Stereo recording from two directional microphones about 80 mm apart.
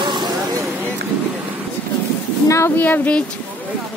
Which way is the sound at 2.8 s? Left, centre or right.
Left.